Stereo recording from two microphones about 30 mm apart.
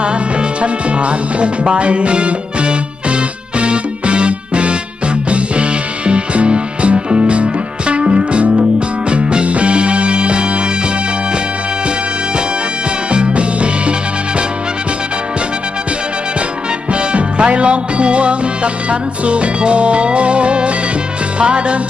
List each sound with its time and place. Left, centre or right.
0.6 s speech: right
1.6 s music: right
6.1 s music: right
13.1 s music: right
16.9 s music: right